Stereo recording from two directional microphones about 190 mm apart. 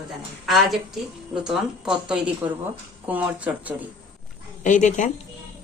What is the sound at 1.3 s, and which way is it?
A woman's voice, centre (ahead or behind).